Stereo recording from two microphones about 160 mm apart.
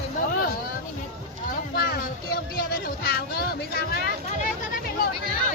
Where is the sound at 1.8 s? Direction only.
70° left (ahead or behind).